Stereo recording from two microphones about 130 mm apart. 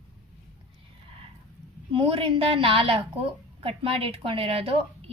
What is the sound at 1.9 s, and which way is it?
A woman's voice, 45° right (ahead or behind).